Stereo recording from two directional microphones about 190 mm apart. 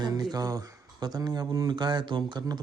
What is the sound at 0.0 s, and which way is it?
Speech, 20° right (ahead or behind).